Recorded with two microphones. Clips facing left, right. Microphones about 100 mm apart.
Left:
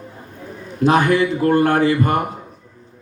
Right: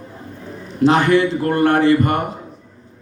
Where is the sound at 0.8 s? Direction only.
30° right (ahead or behind).